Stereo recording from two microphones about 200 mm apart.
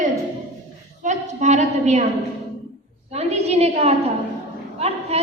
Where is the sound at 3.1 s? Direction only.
30° right (ahead or behind).